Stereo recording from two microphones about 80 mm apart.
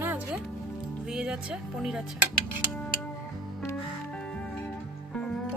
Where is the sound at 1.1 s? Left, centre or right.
Centre.